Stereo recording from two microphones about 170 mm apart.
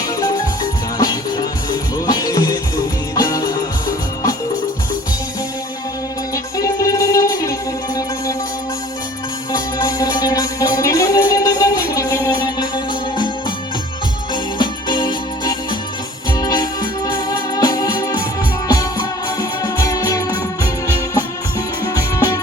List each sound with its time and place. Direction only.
0.2 s music: 20° left (ahead or behind)
6.3 s music: 20° left (ahead or behind)
9.5 s music: 20° left (ahead or behind)
14.6 s music: 25° left (ahead or behind)
21.9 s music: 20° left (ahead or behind)